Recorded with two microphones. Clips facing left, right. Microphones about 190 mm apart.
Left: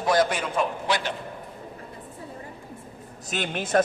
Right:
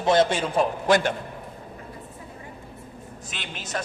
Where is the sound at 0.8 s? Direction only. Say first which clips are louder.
Right 6 dB; 50° right (ahead or behind).